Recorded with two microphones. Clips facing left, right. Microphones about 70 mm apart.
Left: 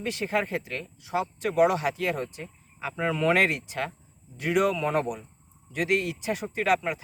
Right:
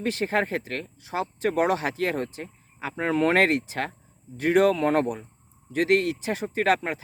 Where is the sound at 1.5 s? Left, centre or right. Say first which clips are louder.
Left 1 dB; right.